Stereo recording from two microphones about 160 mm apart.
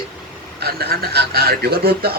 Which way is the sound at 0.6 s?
85° right.